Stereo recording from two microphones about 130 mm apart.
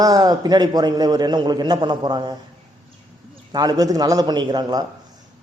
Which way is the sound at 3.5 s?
30° right (ahead or behind).